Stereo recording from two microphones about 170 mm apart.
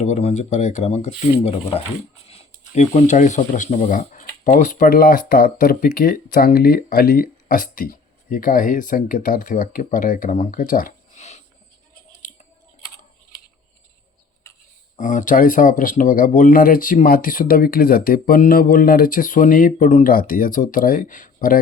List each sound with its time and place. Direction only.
0.0 s speech: 40° left (ahead or behind)
12.2 s chewing: 50° left (ahead or behind)
14.9 s speech: 50° left (ahead or behind)